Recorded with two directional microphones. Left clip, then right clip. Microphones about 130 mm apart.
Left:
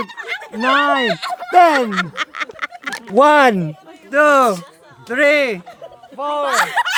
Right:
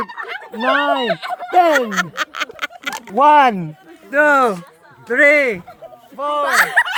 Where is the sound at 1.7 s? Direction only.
30° right (ahead or behind).